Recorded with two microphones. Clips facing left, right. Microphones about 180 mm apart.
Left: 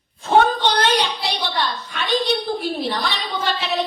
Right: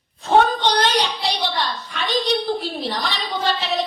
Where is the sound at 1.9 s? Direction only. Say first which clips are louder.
Even; 35° right (ahead or behind).